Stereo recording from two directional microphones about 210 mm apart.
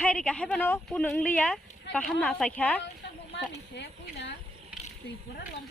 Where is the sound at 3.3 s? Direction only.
55° left (ahead or behind).